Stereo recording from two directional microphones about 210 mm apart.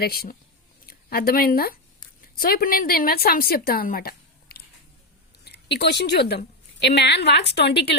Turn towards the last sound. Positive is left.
turn(degrees=55)  # may be behind; listen again after turning